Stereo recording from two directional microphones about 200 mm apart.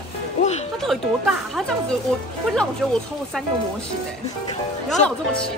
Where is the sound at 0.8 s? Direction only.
Centre (ahead or behind).